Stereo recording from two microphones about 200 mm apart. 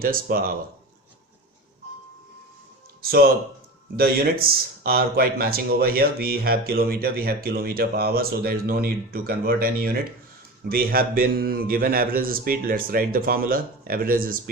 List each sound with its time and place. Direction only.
0.0 s speech: 45° right (ahead or behind)
3.0 s speech: 50° right (ahead or behind)